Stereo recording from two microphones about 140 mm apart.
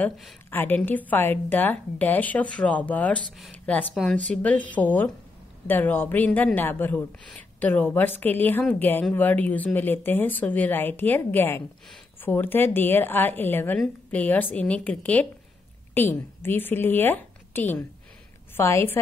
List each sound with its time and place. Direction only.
0.5 s a woman's voice: 15° left (ahead or behind)